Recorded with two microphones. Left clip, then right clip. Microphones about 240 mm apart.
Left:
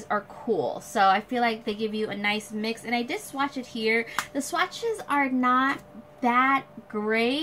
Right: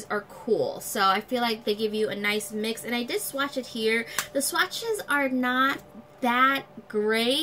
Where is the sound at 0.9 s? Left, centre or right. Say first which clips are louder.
Left 2 dB; centre.